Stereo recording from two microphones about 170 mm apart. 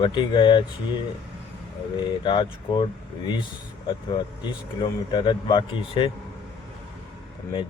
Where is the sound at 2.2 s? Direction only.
30° left (ahead or behind).